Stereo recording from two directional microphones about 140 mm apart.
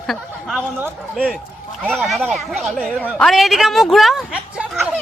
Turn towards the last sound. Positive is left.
turn(degrees=-5)  # may be behind; listen again after turning